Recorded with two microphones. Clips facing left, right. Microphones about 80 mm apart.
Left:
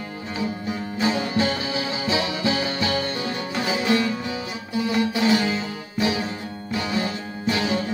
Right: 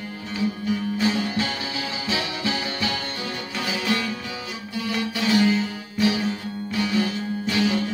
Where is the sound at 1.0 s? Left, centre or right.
Left.